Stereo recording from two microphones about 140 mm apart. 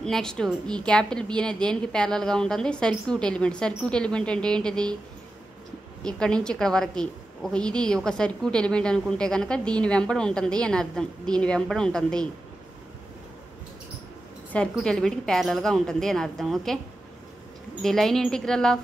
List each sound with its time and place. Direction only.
0.0 s a woman's voice: 5° left (ahead or behind)
6.0 s a woman's voice: 5° left (ahead or behind)
14.5 s a woman's voice: 5° left (ahead or behind)
17.8 s a woman's voice: 5° left (ahead or behind)